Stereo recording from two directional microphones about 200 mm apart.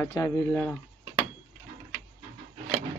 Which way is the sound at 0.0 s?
15° left (ahead or behind).